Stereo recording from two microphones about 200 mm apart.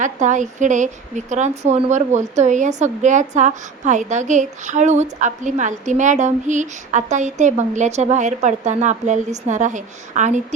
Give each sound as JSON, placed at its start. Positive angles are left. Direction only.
{"t": 0.0, "sound": "speech", "side_deg": -40}